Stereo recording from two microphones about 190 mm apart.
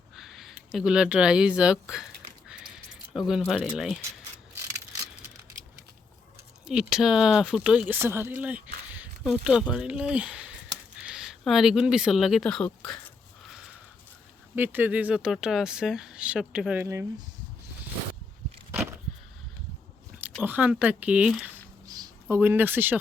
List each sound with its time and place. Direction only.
0.2 s speech: centre (ahead or behind)
3.1 s speech: centre (ahead or behind)
6.7 s speech: 5° right (ahead or behind)
14.5 s speech: 10° right (ahead or behind)
18.7 s a sound: 10° right (ahead or behind)
20.4 s speech: 10° right (ahead or behind)
21.8 s a sound: 20° right (ahead or behind)
22.4 s speech: 10° right (ahead or behind)